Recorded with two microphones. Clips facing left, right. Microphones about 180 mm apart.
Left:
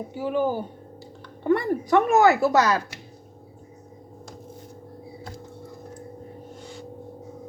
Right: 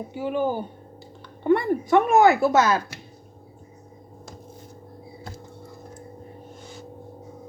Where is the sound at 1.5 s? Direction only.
20° right (ahead or behind).